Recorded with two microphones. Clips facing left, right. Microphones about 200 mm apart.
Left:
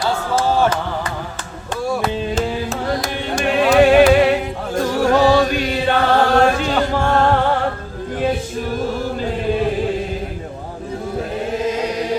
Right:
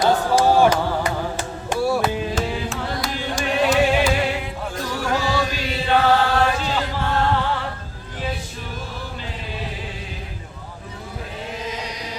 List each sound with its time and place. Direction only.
0.0 s a sound: 15° right (ahead or behind)
2.6 s carnatic music: 50° left (ahead or behind)
4.7 s music: 50° left (ahead or behind)
5.3 s chant: 55° left (ahead or behind)
6.6 s music: 55° left (ahead or behind)
8.8 s chant: 50° left (ahead or behind)